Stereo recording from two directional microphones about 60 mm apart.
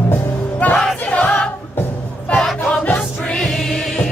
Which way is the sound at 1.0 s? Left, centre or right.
Left.